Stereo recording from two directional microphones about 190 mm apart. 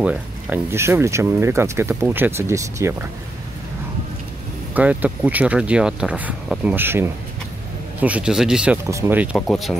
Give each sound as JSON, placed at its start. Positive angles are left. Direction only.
{"t": 0.0, "sound": "speech", "side_deg": -10}
{"t": 4.7, "sound": "speech", "side_deg": -10}
{"t": 8.8, "sound": "speech", "side_deg": -15}